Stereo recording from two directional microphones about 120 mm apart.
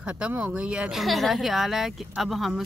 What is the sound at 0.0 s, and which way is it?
A woman's voice, 10° right (ahead or behind).